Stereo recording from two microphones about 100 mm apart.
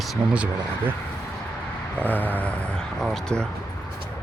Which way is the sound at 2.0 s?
15° left (ahead or behind).